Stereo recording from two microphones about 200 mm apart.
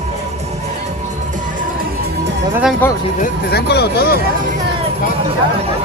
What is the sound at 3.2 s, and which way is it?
Speech, 50° left (ahead or behind).